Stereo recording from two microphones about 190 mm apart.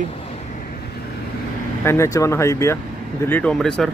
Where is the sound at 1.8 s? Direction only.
15° left (ahead or behind).